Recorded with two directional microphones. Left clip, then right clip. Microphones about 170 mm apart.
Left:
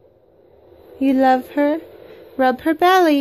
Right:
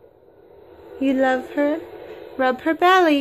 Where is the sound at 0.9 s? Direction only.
35° left (ahead or behind).